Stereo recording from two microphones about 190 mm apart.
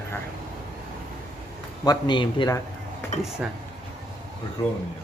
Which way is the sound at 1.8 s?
20° left (ahead or behind).